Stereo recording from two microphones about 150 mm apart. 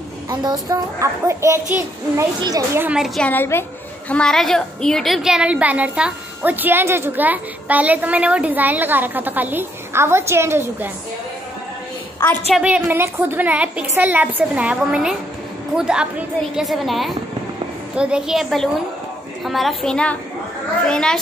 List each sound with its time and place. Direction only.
0.3 s a woman's voice: 25° right (ahead or behind)
2.8 s a woman's voice: 5° right (ahead or behind)
3.2 s a woman's voice: 10° left (ahead or behind); by 10.9 s 15° right (ahead or behind)
12.2 s a woman's voice: 10° left (ahead or behind)
12.5 s a woman's voice: 10° right (ahead or behind)